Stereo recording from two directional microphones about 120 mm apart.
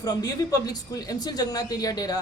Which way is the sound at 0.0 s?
30° left (ahead or behind).